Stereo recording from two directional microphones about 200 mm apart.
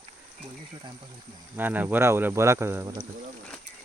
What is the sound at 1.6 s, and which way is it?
Speech, 10° right (ahead or behind).